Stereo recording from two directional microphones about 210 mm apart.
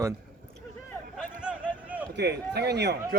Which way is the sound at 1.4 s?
5° right (ahead or behind).